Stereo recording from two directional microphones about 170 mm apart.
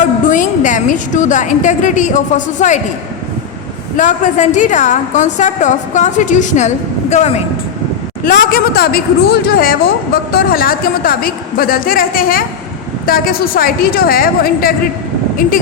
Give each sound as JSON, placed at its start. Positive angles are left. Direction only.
{"t": 0.3, "sound": "a woman's voice", "side_deg": 50}
{"t": 3.9, "sound": "a woman's voice", "side_deg": 45}
{"t": 8.2, "sound": "a woman's voice", "side_deg": 60}